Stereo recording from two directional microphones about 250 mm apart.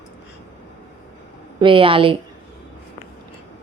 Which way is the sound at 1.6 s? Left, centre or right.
Centre.